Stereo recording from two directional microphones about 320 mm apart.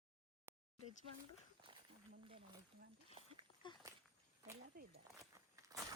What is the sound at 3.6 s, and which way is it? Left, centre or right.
Walk, centre.